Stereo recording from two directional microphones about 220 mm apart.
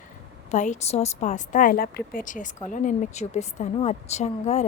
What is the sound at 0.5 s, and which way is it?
A woman's voice, 35° left (ahead or behind).